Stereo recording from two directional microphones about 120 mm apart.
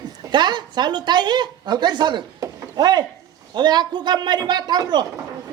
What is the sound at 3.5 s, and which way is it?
Speech, 35° right (ahead or behind).